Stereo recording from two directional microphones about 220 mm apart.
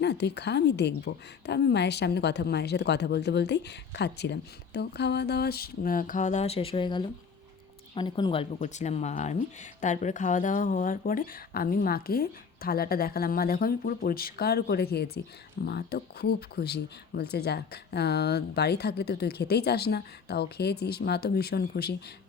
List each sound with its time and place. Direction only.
0.0 s a woman's voice: 50° left (ahead or behind)